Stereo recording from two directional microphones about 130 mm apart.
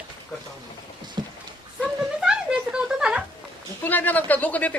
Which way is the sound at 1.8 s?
5° right (ahead or behind).